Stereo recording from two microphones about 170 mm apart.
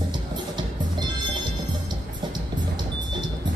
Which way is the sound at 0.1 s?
25° right (ahead or behind).